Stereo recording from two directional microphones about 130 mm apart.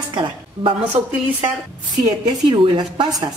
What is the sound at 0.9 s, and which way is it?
Speech, 50° right (ahead or behind).